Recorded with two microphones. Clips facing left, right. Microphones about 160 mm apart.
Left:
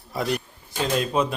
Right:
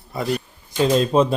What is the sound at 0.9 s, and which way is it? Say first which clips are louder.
Speech: right 5 dB; 30° right (ahead or behind).